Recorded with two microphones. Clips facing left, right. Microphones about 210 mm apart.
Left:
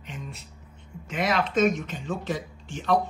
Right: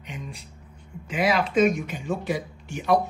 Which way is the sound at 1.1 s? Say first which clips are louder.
Right 3 dB; 5° right (ahead or behind).